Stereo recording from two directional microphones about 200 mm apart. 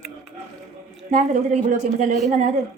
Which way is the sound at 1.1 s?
40° right (ahead or behind).